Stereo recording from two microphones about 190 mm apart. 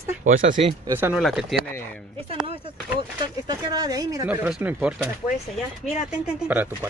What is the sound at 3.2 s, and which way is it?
Speech, 20° right (ahead or behind).